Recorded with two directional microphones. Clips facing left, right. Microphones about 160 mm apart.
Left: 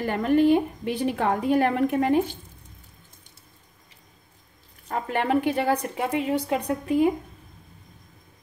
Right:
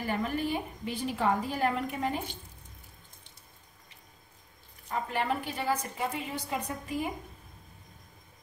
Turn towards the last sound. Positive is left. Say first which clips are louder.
# left 10 dB
turn(degrees=65)  # may be behind; listen again after turning